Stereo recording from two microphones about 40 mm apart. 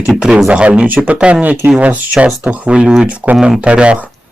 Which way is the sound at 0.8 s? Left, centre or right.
Right.